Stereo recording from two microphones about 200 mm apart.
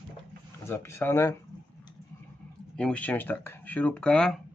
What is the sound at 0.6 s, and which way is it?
Speech, 10° left (ahead or behind).